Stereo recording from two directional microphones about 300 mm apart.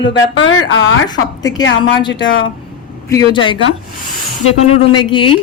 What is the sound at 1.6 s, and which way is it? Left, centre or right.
Speech, left.